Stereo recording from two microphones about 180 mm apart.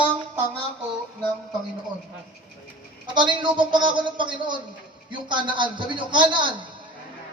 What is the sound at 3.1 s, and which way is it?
A man's voice, 25° right (ahead or behind).